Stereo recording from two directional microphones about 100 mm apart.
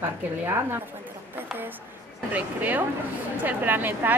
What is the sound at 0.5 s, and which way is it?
A woman's voice, 20° right (ahead or behind).